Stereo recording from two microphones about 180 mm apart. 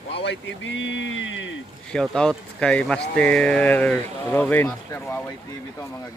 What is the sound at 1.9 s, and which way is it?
Speech, 5° left (ahead or behind).